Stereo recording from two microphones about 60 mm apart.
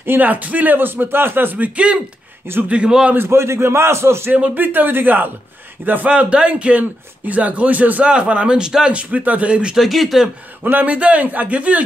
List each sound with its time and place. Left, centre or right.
0.0 s speech: right
2.7 s a man's voice: centre
3.2 s a man's voice: right
4.3 s speech: right
6.0 s speech: centre
9.1 s speech: right
9.8 s speech: centre
10.6 s speech: right